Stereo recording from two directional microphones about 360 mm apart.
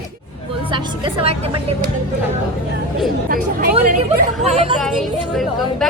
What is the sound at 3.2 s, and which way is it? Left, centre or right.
A woman's voice, right.